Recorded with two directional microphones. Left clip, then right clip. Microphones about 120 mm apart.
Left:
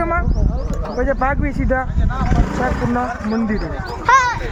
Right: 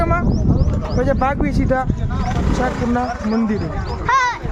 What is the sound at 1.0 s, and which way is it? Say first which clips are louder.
Speech: even; 25° right (ahead or behind).